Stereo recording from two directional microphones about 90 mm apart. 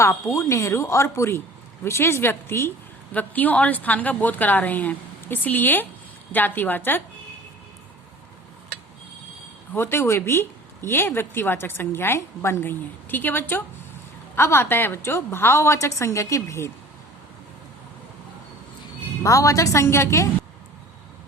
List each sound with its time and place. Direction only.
0.0 s a woman's voice: 35° left (ahead or behind)
9.7 s a woman's voice: 25° left (ahead or behind)
19.2 s speech: 35° left (ahead or behind)